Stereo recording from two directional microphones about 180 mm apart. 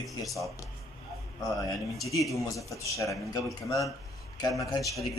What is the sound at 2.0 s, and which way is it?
A man's voice, 20° left (ahead or behind).